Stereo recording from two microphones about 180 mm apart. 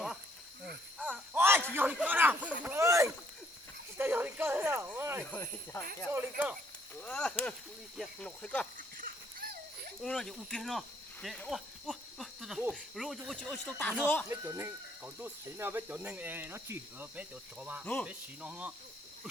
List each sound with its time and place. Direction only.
0.9 s a sound: 10° right (ahead or behind)
3.9 s snake: 10° right (ahead or behind)
5.2 s speech: 10° left (ahead or behind)
6.1 s speech: 10° right (ahead or behind)
7.0 s speech: 5° left (ahead or behind)
9.0 s a sound: 55° right (ahead or behind)
10.0 s speech: centre (ahead or behind)
14.3 s speech: 15° right (ahead or behind)